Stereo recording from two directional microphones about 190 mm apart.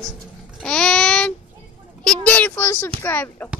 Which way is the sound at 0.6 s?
5° left (ahead or behind).